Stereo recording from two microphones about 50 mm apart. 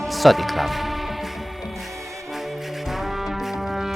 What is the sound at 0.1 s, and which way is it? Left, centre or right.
Music, centre.